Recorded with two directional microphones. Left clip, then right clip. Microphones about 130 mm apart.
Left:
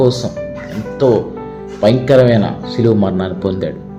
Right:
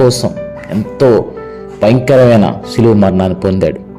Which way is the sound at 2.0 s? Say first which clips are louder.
Right 3 dB; 50° right (ahead or behind).